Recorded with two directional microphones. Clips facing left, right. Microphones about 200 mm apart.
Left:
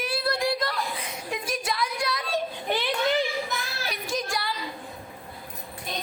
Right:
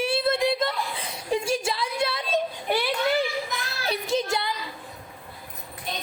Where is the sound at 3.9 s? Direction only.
25° right (ahead or behind).